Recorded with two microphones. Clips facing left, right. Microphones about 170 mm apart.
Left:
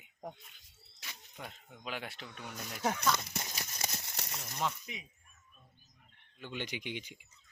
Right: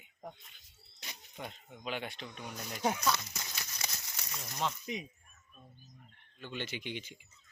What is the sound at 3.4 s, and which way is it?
Horse, 30° left (ahead or behind).